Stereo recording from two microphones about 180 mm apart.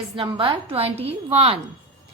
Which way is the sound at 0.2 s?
30° right (ahead or behind).